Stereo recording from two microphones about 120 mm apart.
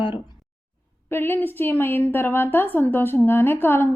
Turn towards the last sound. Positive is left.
turn(degrees=20)  # may be behind; listen again after turning